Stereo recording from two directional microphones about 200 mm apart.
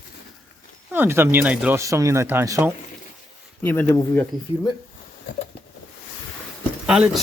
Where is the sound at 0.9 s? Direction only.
10° right (ahead or behind).